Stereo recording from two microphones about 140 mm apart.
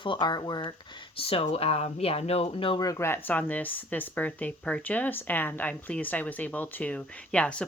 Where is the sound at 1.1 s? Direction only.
40° left (ahead or behind).